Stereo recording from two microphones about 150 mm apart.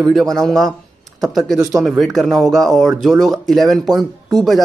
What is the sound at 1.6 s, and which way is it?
Speech, 20° right (ahead or behind).